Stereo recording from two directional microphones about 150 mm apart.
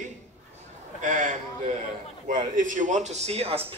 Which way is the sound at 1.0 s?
60° right (ahead or behind).